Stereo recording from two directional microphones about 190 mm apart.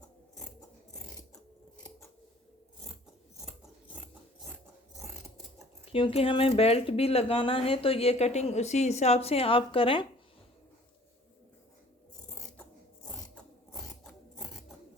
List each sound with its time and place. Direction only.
5.8 s speech: 30° left (ahead or behind)
13.1 s mechanisms: 5° left (ahead or behind)